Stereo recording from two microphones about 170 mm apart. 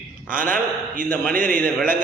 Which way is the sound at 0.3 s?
55° right (ahead or behind).